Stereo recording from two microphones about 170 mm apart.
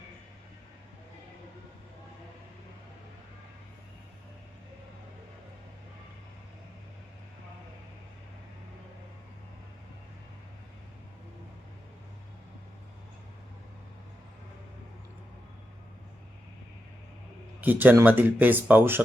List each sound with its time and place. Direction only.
17.6 s speech: 10° right (ahead or behind)